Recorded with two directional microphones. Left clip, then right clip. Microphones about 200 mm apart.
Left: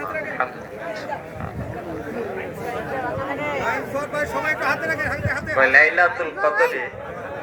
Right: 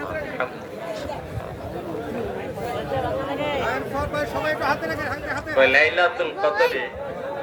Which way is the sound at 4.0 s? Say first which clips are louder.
Left 1 dB; 35° left (ahead or behind).